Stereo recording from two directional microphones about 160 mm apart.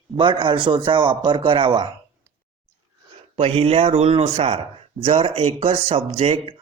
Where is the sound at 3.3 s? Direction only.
40° right (ahead or behind).